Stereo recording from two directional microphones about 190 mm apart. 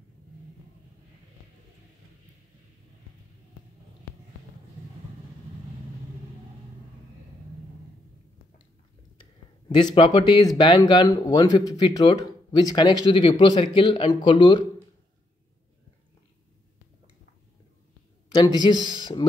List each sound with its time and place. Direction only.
9.2 s speech: 25° left (ahead or behind)
18.6 s speech: 25° left (ahead or behind)